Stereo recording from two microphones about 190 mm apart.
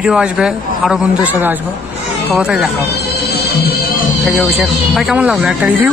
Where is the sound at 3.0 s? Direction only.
55° left (ahead or behind).